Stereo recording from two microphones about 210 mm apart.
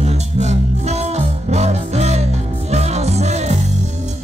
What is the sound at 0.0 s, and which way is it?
Music, 30° right (ahead or behind).